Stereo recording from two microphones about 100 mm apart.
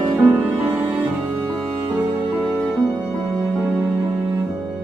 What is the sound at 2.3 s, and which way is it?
Music, 15° right (ahead or behind).